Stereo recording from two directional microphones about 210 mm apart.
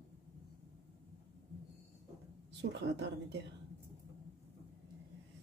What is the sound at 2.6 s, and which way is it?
Speech, 55° right (ahead or behind).